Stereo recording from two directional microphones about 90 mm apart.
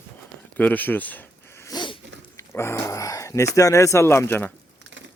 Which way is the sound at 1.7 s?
60° left (ahead or behind).